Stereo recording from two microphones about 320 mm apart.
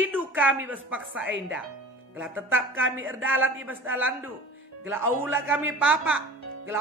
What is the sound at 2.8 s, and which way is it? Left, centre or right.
Speech, right.